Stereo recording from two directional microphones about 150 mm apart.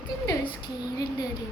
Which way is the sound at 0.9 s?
25° left (ahead or behind).